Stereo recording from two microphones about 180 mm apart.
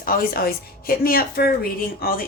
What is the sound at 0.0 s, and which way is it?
A woman's voice, 55° left (ahead or behind).